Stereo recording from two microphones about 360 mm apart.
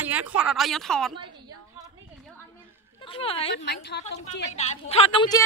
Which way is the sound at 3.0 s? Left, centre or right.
Centre.